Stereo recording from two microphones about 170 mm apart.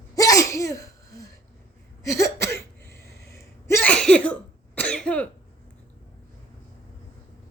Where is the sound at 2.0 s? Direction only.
20° left (ahead or behind).